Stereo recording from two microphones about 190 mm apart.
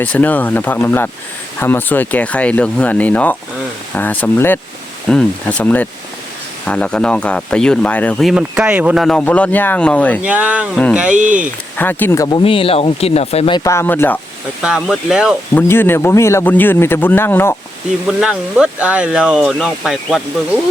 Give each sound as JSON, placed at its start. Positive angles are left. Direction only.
{"t": 0.0, "sound": "a man's voice", "side_deg": 10}
{"t": 10.2, "sound": "speech", "side_deg": -10}
{"t": 11.1, "sound": "speech", "side_deg": -40}
{"t": 11.8, "sound": "a man's voice", "side_deg": 10}
{"t": 12.4, "sound": "speech", "side_deg": 30}
{"t": 13.7, "sound": "a man's voice", "side_deg": 10}
{"t": 14.6, "sound": "speech", "side_deg": 0}
{"t": 15.5, "sound": "a man's voice", "side_deg": 10}
{"t": 18.0, "sound": "speech", "side_deg": -5}